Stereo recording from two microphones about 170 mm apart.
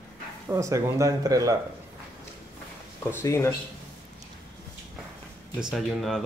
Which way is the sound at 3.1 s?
15° left (ahead or behind).